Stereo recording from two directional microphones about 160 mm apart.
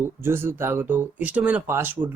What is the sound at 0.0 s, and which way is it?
Speech, 15° right (ahead or behind).